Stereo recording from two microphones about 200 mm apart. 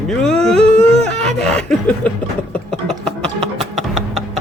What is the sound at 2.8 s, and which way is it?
Music, 5° left (ahead or behind).